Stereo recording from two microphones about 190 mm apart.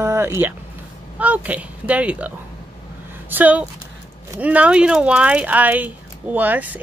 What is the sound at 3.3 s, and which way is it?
Speech, 10° right (ahead or behind).